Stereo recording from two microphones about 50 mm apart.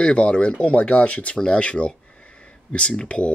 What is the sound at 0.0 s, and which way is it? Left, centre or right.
Speech, centre.